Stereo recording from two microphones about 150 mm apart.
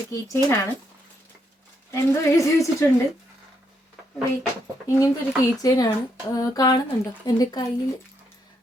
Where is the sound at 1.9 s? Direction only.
20° left (ahead or behind).